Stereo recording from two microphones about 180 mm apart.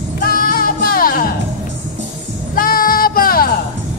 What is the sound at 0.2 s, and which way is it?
Music, 55° left (ahead or behind).